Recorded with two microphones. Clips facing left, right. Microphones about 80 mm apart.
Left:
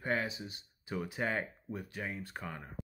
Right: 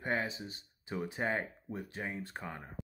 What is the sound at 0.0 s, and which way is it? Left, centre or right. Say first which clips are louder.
Speech: even; right.